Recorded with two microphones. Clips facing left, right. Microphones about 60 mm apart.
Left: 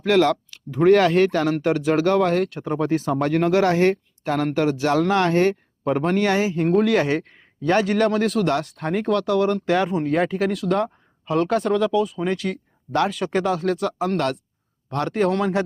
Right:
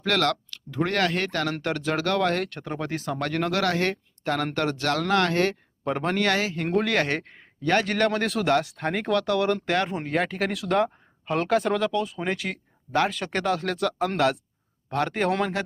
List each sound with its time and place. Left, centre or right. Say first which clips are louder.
0.0 s speech: left 6 dB; centre
1.5 s speech: left 7 dB; centre
2.8 s speech: left 10 dB; left
3.1 s speech: left 5 dB; centre
5.8 s speech: left 5 dB; centre
6.2 s speech: left 5 dB; centre
6.7 s speech: left 5 dB; centre